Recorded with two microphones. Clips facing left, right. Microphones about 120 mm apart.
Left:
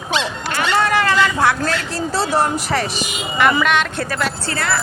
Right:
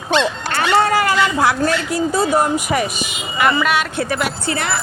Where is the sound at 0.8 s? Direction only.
25° right (ahead or behind).